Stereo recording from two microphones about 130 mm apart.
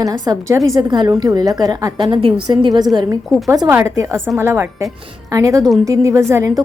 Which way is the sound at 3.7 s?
20° right (ahead or behind).